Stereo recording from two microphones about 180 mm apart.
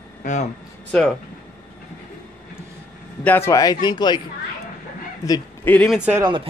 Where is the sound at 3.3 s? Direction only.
15° left (ahead or behind).